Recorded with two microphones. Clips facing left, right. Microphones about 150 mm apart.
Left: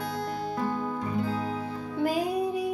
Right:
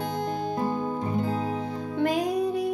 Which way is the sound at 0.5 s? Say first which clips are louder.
Right 1 dB; 25° right (ahead or behind).